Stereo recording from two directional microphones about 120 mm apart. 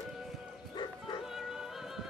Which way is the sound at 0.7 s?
40° left (ahead or behind).